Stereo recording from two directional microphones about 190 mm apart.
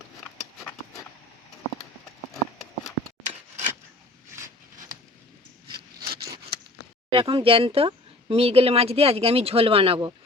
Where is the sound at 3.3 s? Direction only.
35° right (ahead or behind).